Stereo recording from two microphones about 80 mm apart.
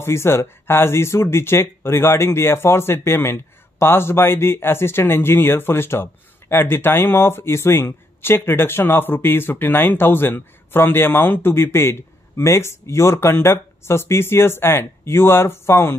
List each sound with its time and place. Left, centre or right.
0.0 s speech: left